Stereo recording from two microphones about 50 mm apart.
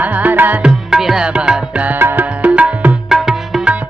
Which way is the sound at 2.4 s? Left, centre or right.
Right.